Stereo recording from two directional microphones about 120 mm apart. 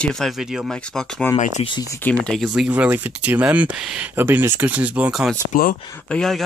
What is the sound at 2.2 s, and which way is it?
Speech, centre (ahead or behind).